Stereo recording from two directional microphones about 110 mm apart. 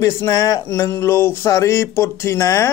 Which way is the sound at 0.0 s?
25° left (ahead or behind).